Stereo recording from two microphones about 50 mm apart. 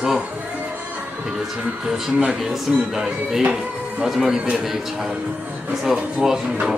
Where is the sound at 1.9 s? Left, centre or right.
Centre.